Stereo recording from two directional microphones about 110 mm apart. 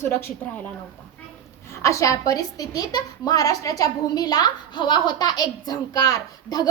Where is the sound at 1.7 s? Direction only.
30° left (ahead or behind).